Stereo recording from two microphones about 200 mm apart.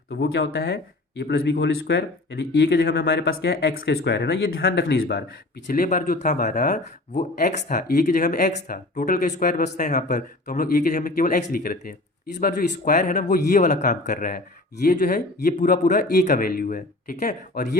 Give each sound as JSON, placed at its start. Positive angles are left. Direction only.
{"t": 0.1, "sound": "speech", "side_deg": 55}